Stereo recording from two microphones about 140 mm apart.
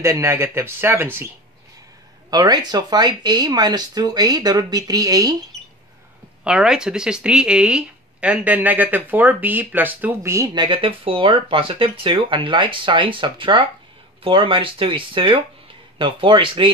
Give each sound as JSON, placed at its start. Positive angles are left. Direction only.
{"t": 0.0, "sound": "speech", "side_deg": -20}
{"t": 2.3, "sound": "speech", "side_deg": -25}
{"t": 6.4, "sound": "speech", "side_deg": -5}